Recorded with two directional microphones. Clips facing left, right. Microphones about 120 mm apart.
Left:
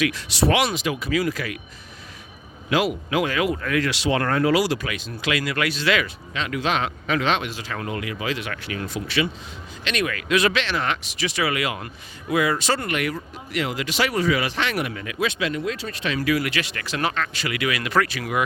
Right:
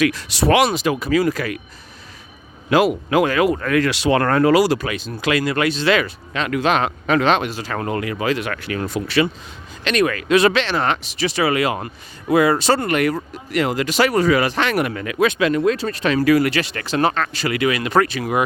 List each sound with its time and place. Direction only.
0.0 s speech: 45° right (ahead or behind)
2.6 s speech: 45° right (ahead or behind); by 6.1 s 30° right (ahead or behind)
6.3 s speech: 55° right (ahead or behind); by 18.4 s 30° right (ahead or behind)